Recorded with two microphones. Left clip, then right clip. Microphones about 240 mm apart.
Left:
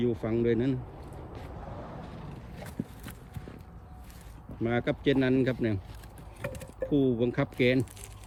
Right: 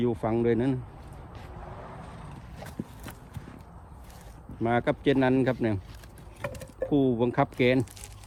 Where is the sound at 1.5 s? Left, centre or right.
Right.